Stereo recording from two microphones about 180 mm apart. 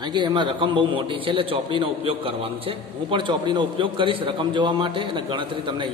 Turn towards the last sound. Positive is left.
turn(degrees=-25)  # may be behind; listen again after turning